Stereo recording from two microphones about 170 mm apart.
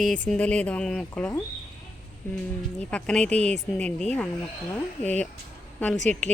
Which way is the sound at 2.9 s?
5° left (ahead or behind).